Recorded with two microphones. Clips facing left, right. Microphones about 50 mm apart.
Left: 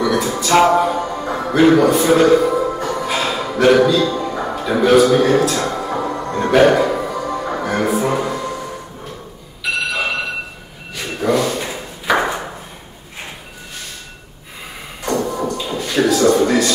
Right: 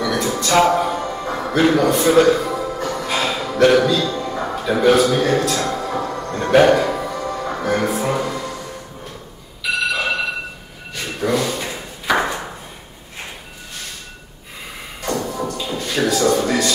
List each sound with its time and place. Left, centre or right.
0.0 s music: centre
1.0 s music: centre
1.3 s music: centre
4.1 s a man's voice: centre
5.4 s music: centre
7.6 s music: centre
11.0 s thump: centre
15.0 s music: centre
15.5 s a sound: centre